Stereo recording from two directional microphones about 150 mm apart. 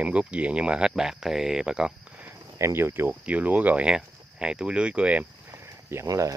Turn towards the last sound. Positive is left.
turn(degrees=-20)  # may be behind; listen again after turning